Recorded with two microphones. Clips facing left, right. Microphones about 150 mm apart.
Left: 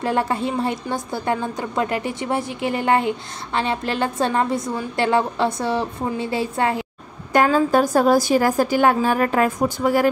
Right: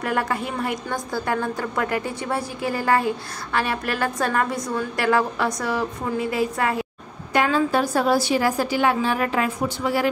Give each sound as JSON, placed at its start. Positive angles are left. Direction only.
{"t": 0.0, "sound": "a woman's voice", "side_deg": 25}
{"t": 7.3, "sound": "a woman's voice", "side_deg": 45}